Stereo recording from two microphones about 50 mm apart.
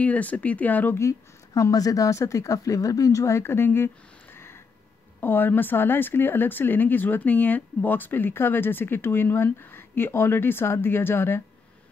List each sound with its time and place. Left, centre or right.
0.0 s speech: left
1.6 s speech: left